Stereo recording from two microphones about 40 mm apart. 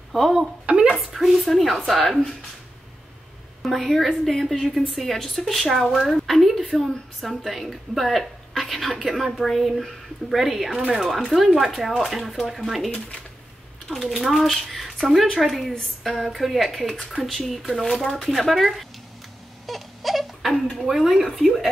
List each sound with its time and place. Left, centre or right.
0.1 s a woman's voice: centre
0.7 s a woman's voice: right
0.9 s a woman's voice: centre
3.6 s a woman's voice: centre
19.6 s crying: centre
20.9 s a woman's voice: centre